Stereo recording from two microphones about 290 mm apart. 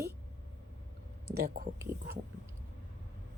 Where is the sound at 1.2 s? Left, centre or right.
Right.